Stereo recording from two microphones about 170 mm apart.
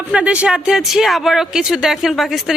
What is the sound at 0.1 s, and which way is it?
Speech, 5° right (ahead or behind).